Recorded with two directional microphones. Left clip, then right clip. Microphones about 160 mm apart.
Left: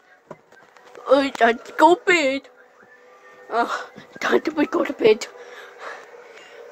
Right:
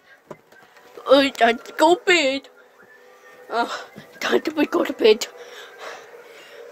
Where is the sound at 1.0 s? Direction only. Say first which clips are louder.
Right 2 dB; 25° right (ahead or behind).